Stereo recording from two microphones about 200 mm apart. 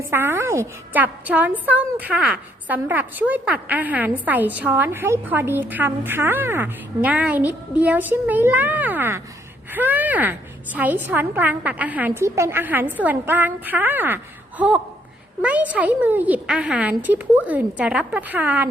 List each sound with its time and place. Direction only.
0.1 s a woman's voice: 10° right (ahead or behind)